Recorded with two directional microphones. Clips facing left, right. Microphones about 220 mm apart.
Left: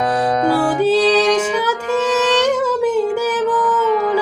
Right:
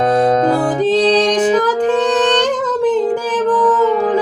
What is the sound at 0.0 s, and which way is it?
Music, 25° right (ahead or behind).